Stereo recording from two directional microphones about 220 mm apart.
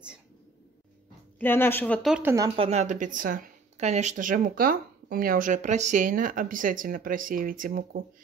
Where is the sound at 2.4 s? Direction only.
25° right (ahead or behind).